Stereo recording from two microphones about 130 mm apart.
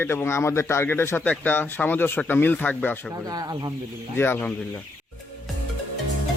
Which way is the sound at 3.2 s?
30° right (ahead or behind).